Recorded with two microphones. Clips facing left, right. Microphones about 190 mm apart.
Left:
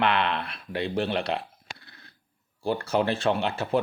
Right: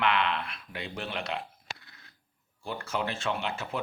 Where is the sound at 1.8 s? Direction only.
35° left (ahead or behind).